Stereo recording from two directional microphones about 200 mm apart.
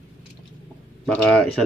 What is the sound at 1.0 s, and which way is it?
Speech, 5° left (ahead or behind).